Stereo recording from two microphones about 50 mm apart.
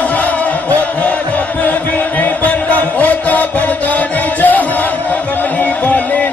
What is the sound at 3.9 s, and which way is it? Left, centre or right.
Music, left.